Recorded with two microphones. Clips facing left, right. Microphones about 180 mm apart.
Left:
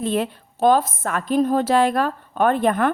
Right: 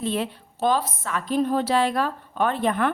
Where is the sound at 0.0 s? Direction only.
50° left (ahead or behind).